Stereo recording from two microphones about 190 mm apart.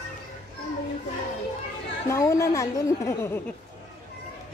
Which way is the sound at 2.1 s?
15° left (ahead or behind).